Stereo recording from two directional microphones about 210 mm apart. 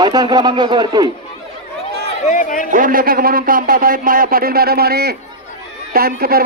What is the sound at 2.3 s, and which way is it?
Speech, 40° left (ahead or behind).